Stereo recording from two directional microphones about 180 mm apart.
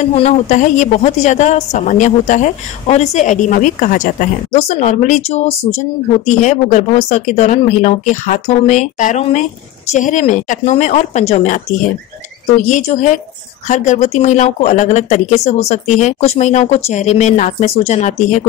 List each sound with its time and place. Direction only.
0.0 s a woman's voice: 40° left (ahead or behind)